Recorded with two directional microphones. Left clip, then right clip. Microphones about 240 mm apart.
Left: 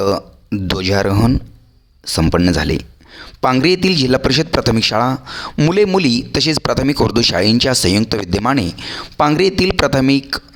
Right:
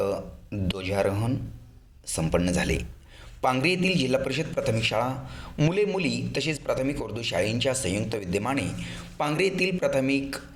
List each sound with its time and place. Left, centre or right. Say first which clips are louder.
0.0 s a man's voice: left 11 dB; left